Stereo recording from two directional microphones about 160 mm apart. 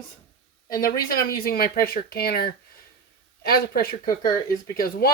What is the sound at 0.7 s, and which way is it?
Speech, 65° left (ahead or behind).